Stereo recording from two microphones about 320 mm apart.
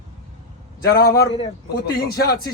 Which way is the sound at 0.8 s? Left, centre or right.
Left.